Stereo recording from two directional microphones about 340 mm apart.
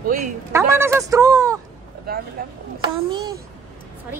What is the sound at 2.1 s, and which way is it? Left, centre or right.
Speech, right.